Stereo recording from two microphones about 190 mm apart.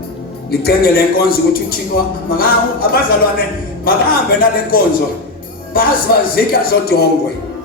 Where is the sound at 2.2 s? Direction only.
50° left (ahead or behind).